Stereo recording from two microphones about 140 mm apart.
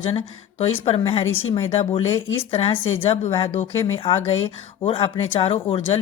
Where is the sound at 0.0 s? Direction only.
45° left (ahead or behind).